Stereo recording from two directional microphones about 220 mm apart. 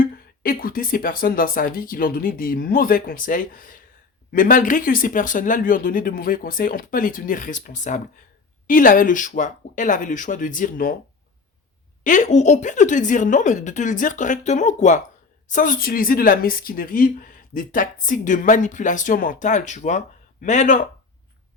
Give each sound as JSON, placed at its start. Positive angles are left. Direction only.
{"t": 0.0, "sound": "speech", "side_deg": 40}
{"t": 12.0, "sound": "speech", "side_deg": 35}